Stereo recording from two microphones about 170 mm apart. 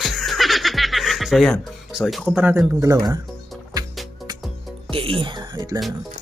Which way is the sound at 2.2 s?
10° right (ahead or behind).